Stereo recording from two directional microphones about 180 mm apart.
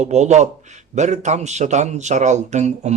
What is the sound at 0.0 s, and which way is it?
Speech, 40° right (ahead or behind).